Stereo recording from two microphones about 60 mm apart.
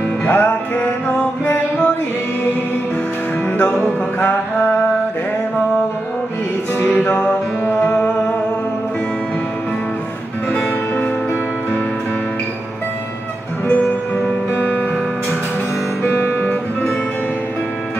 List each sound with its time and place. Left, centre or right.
0.2 s music: left
7.0 s music: left
10.5 s music: left
14.5 s music: left
16.1 s music: left